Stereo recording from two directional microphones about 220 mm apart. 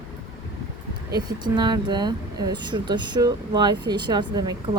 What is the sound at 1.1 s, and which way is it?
Speech, 20° right (ahead or behind).